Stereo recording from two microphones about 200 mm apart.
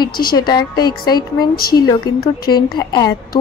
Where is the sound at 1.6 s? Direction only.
50° left (ahead or behind).